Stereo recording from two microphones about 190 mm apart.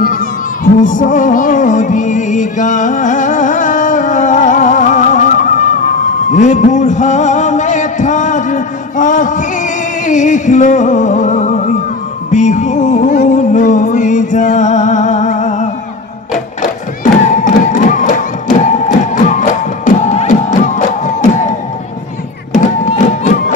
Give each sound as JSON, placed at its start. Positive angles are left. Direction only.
{"t": 0.7, "sound": "music", "side_deg": 45}
{"t": 17.0, "sound": "music", "side_deg": 40}
{"t": 22.6, "sound": "music", "side_deg": 40}